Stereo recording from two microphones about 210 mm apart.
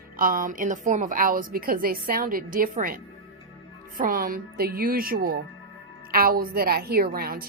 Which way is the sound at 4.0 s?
40° right (ahead or behind).